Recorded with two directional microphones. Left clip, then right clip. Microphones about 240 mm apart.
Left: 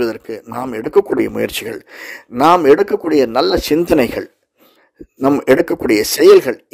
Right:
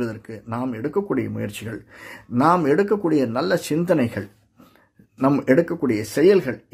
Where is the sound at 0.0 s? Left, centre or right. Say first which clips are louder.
Left 10 dB; left.